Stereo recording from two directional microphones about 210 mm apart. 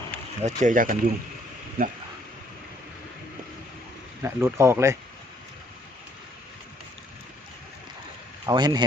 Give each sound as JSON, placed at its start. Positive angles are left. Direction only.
{"t": 0.4, "sound": "speech", "side_deg": -40}
{"t": 4.2, "sound": "speech", "side_deg": -15}
{"t": 8.4, "sound": "speech", "side_deg": -20}